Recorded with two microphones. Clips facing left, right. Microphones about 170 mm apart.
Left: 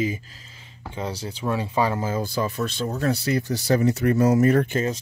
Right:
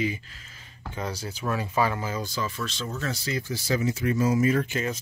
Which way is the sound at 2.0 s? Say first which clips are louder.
Left 5 dB; 50° left (ahead or behind).